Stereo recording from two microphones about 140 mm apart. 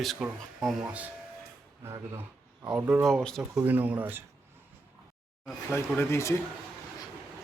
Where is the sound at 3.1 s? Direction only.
5° left (ahead or behind).